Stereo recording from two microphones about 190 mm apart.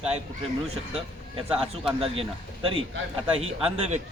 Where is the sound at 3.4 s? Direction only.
35° right (ahead or behind).